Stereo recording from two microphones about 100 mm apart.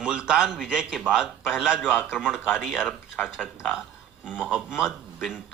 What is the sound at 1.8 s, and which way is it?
Speech, 15° left (ahead or behind).